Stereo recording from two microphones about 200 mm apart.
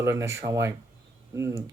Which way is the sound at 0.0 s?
15° right (ahead or behind).